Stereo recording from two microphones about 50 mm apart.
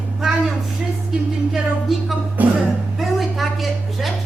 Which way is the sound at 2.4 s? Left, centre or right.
Right.